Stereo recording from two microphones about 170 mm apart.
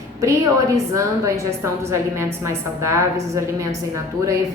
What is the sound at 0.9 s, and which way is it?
A woman's voice, 15° right (ahead or behind).